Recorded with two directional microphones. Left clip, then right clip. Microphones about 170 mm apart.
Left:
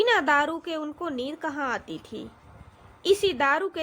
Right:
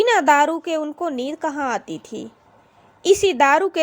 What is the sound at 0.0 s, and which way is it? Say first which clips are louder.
A woman's voice: right 7 dB; 30° right (ahead or behind).